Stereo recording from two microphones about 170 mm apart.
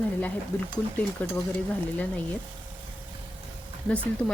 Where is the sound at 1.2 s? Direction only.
10° left (ahead or behind).